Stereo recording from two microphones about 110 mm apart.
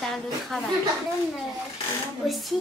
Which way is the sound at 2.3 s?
Centre (ahead or behind).